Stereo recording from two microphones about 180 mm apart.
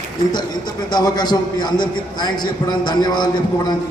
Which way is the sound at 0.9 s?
25° left (ahead or behind).